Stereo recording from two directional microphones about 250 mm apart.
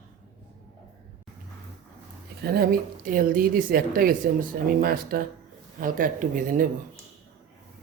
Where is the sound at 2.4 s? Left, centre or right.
Right.